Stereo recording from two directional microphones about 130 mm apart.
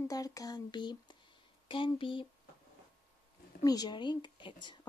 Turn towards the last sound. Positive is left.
turn(degrees=35)  # may be behind; listen again after turning